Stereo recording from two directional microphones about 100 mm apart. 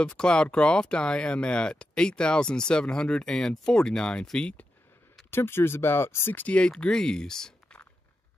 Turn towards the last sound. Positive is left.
turn(degrees=5)  # may be behind; listen again after turning